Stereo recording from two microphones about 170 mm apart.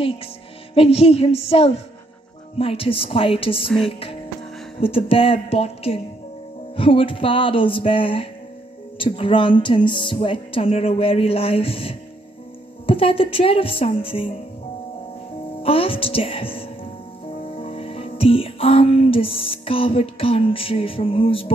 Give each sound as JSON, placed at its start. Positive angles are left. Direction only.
{"t": 0.7, "sound": "speech", "side_deg": 35}
{"t": 4.7, "sound": "speech", "side_deg": 35}
{"t": 15.6, "sound": "speech", "side_deg": 35}
{"t": 17.4, "sound": "music", "side_deg": 35}